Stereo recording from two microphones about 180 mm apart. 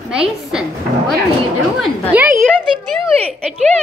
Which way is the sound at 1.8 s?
10° right (ahead or behind).